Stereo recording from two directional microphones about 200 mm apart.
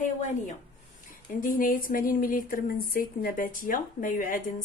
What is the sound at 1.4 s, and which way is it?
Speech, 45° left (ahead or behind).